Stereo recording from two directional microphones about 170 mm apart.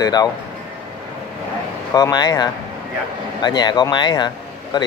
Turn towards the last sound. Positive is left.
turn(degrees=25)  # may be behind; listen again after turning